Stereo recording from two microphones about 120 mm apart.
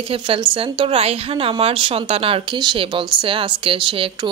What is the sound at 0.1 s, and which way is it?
A woman's voice, 50° right (ahead or behind).